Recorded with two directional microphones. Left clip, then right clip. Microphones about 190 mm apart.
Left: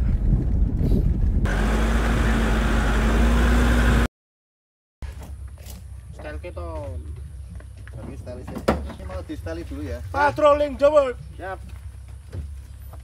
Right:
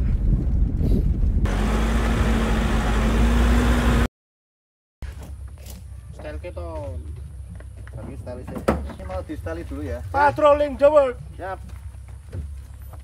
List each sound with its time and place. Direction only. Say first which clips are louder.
0.0 s vehicle: left 1 dB; centre (ahead or behind)
5.0 s speech: even; centre (ahead or behind)
11.3 s speech: right 1 dB; 15° right (ahead or behind)
12.3 s vehicle: right 1 dB; 5° left (ahead or behind)